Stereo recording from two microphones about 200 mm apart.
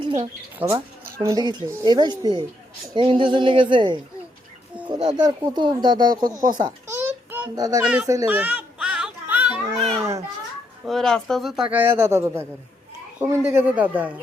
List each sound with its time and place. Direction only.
0.2 s a man's voice: 15° right (ahead or behind)
7.0 s child singing: 10° right (ahead or behind)
7.5 s speech: 20° right (ahead or behind)
8.0 s children playing: 15° right (ahead or behind)
10.8 s a man's voice: centre (ahead or behind)